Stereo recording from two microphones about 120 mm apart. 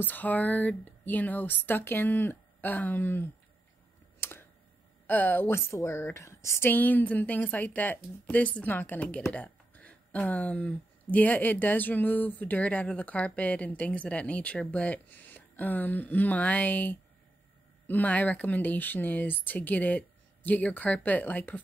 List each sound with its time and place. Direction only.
0.0 s speech: 15° left (ahead or behind)
4.2 s computer keyboard: 20° left (ahead or behind)
5.0 s speech: 15° left (ahead or behind)